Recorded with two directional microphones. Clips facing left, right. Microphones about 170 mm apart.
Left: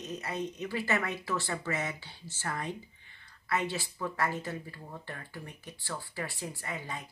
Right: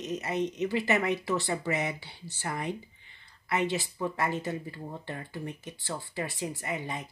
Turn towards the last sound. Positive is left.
turn(degrees=-20)  # may be behind; listen again after turning